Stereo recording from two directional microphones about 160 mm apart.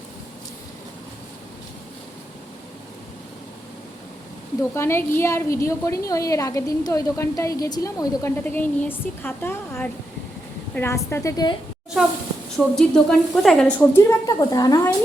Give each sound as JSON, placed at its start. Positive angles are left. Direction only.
{"t": 4.7, "sound": "a woman's voice", "side_deg": 15}
{"t": 12.5, "sound": "a woman's voice", "side_deg": 5}
{"t": 13.9, "sound": "a woman's voice", "side_deg": 20}